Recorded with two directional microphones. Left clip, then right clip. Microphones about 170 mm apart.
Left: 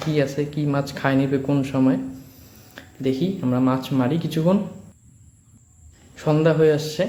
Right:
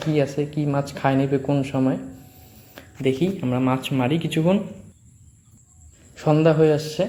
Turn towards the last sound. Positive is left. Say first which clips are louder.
# left 1 dB
turn(degrees=-10)  # may be behind; listen again after turning